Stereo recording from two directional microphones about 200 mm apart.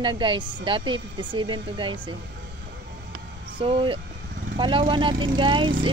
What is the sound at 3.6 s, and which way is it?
Speech, 25° right (ahead or behind).